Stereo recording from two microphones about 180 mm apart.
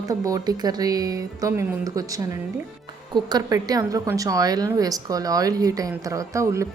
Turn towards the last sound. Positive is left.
turn(degrees=-15)  # may be behind; listen again after turning